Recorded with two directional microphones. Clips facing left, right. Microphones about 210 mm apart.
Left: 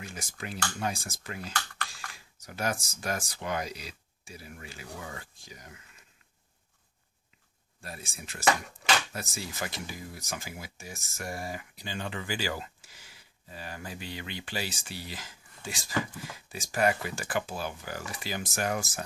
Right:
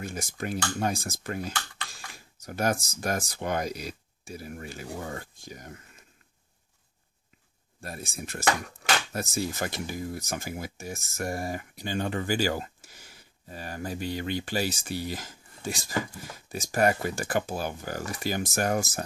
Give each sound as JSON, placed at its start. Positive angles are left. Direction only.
{"t": 0.0, "sound": "speech", "side_deg": -45}
{"t": 7.8, "sound": "speech", "side_deg": -45}